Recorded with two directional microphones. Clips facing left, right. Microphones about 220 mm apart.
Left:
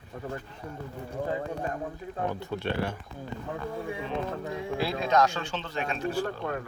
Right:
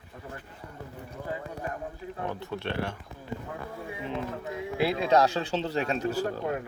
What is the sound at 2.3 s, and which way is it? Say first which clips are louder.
Speech: left 2 dB; centre (ahead or behind).